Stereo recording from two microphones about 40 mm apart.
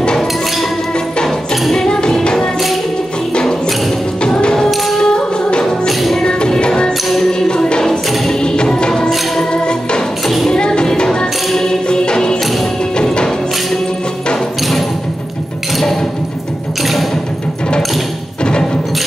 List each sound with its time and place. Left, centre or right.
0.0 s music: centre
1.5 s music: centre
4.4 s tambourine: centre
4.6 s music: centre
5.0 s music: centre
7.2 s tambourine: centre
8.3 s music: left
10.2 s music: centre
10.5 s music: left
18.4 s music: left